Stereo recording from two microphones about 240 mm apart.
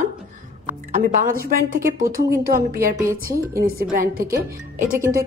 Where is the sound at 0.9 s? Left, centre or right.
Right.